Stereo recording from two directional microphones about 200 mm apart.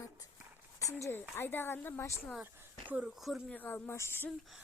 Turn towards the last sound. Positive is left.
turn(degrees=10)  # may be behind; listen again after turning